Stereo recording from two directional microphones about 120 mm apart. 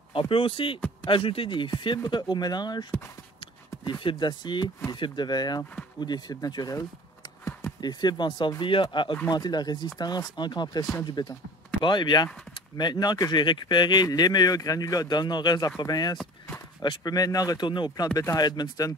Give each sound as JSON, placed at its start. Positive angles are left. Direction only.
{"t": 0.1, "sound": "speech", "side_deg": 50}
{"t": 18.0, "sound": "speech", "side_deg": 30}